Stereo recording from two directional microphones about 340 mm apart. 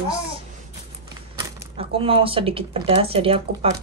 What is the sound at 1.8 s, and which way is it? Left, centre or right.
Speech, centre.